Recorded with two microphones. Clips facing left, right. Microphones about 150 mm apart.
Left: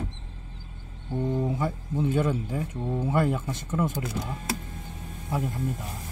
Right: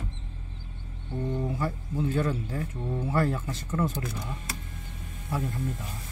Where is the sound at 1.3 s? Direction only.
20° left (ahead or behind).